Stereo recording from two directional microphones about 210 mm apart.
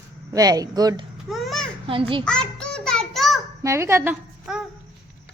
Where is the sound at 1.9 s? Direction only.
25° right (ahead or behind).